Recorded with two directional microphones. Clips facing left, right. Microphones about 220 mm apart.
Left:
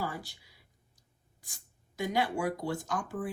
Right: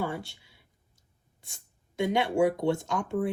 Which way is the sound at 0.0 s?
25° right (ahead or behind).